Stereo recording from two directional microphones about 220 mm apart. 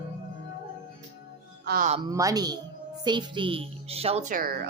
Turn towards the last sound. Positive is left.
turn(degrees=-40)  # may be behind; listen again after turning